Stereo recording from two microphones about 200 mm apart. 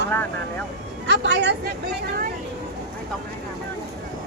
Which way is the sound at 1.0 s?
60° right (ahead or behind).